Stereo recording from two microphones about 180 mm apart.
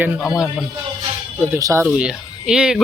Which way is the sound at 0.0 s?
5° right (ahead or behind).